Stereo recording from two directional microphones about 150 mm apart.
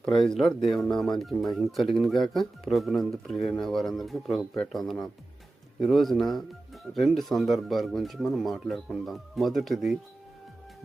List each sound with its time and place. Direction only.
0.0 s speech: 5° left (ahead or behind)